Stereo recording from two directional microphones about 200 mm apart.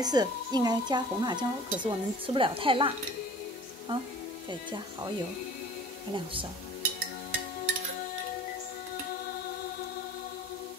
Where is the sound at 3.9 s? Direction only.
25° right (ahead or behind).